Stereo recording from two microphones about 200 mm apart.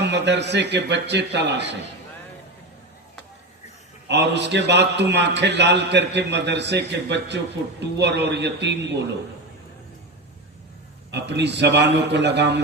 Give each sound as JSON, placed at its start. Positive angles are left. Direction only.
{"t": 0.0, "sound": "a man's voice", "side_deg": -60}
{"t": 4.1, "sound": "a man's voice", "side_deg": -60}
{"t": 11.1, "sound": "a man's voice", "side_deg": -60}